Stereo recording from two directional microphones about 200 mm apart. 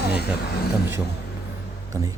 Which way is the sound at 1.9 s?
15° right (ahead or behind).